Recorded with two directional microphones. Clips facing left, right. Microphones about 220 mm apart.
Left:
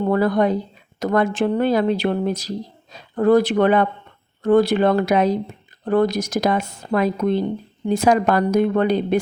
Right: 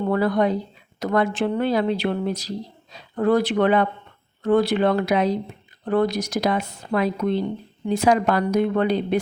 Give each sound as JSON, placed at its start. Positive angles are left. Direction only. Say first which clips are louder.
{"t": 0.1, "sound": "speech", "louder": "left 2 dB", "side_deg": 45}